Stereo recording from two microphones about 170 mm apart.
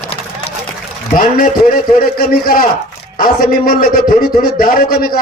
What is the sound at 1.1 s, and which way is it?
A man's voice, 55° left (ahead or behind).